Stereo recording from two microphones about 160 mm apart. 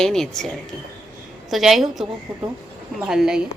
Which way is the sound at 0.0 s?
5° left (ahead or behind).